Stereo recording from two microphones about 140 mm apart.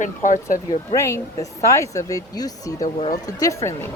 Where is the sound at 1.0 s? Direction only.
20° left (ahead or behind).